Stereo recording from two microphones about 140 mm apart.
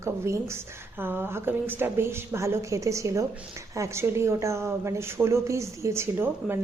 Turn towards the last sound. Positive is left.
turn(degrees=-15)  # may be behind; listen again after turning